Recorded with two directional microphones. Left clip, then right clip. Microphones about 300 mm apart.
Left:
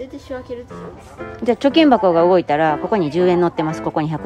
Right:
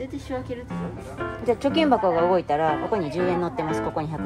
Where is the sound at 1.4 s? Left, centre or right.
Left.